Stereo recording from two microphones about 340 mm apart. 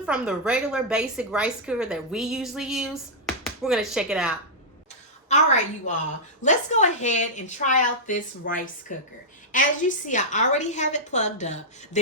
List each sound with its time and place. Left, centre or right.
0.0 s a woman's voice: centre
5.3 s a woman's voice: left